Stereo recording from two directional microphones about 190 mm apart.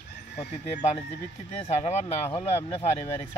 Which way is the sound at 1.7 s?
35° left (ahead or behind).